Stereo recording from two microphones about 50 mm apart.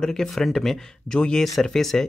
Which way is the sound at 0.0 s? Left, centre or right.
Centre.